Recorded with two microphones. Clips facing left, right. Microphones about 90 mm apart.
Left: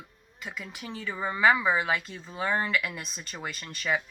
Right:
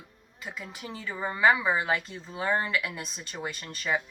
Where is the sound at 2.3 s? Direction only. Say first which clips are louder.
Even; 10° right (ahead or behind).